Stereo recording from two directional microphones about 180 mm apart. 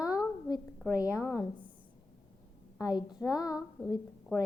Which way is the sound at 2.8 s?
20° left (ahead or behind).